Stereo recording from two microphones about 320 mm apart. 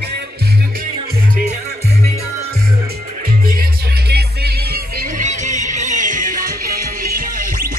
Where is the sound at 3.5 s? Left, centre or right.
Right.